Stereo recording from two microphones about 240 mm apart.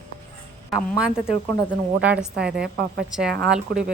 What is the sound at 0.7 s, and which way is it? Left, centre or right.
Speech, centre.